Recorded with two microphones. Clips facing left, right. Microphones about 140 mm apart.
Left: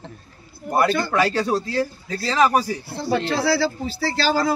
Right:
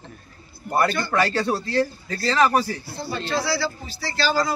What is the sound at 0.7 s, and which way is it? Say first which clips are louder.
A man's voice: left 2 dB; 10° left (ahead or behind).